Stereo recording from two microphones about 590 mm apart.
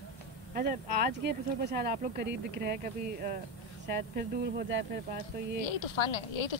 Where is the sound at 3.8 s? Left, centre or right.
Centre.